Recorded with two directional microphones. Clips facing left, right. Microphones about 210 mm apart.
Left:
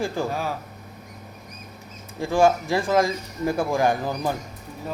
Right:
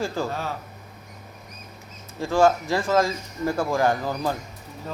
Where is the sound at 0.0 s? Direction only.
15° left (ahead or behind).